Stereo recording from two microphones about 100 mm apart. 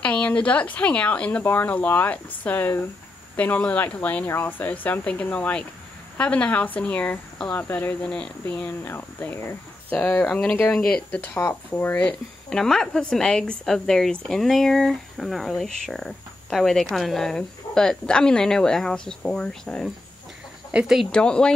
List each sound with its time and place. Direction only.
0.0 s speech: 10° left (ahead or behind)
8.1 s speech: 10° left (ahead or behind)
8.6 s speech: 20° left (ahead or behind)
11.3 s speech: 25° left (ahead or behind); by 19.9 s 5° left (ahead or behind)
20.7 s speech: 5° right (ahead or behind)
21.1 s speech: 10° left (ahead or behind)